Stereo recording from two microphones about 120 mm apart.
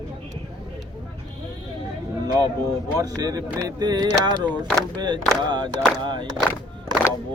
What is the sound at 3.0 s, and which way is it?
Speech, 30° right (ahead or behind).